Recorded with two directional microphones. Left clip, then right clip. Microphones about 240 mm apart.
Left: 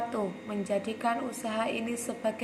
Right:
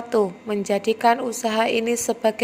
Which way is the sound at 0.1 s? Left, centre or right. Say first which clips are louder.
Right 12 dB; right.